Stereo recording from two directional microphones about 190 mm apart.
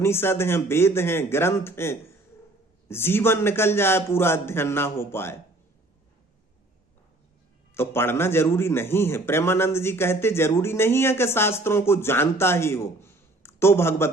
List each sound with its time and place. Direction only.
0.0 s a man's voice: 10° left (ahead or behind)
7.7 s a man's voice: 10° left (ahead or behind)